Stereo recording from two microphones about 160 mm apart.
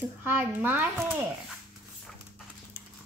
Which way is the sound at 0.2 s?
10° right (ahead or behind).